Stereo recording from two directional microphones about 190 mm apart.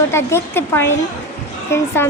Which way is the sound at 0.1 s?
15° left (ahead or behind).